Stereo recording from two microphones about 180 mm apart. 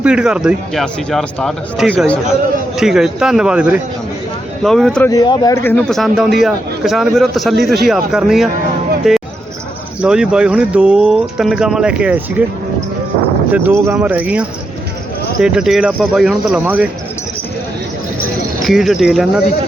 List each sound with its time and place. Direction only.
0.0 s a man's voice: 5° right (ahead or behind)
5.0 s speech: 20° left (ahead or behind)
5.7 s a man's voice: centre (ahead or behind)
13.5 s a man's voice: 10° right (ahead or behind)
18.6 s a man's voice: centre (ahead or behind)